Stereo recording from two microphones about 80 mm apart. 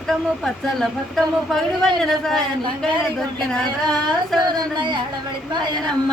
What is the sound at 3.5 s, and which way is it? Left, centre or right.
Speech, centre.